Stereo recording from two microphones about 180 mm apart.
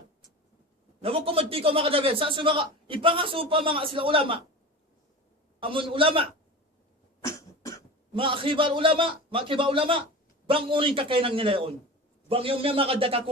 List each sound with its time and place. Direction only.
1.0 s a man's voice: 30° right (ahead or behind)
5.5 s a man's voice: 30° right (ahead or behind)
7.2 s cough: 15° left (ahead or behind)
8.1 s a man's voice: 30° right (ahead or behind)